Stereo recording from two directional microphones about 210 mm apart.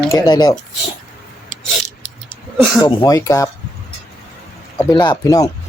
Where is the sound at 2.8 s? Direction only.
15° left (ahead or behind).